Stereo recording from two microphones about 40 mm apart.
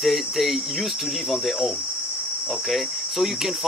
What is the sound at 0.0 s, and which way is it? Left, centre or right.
Cricket, centre.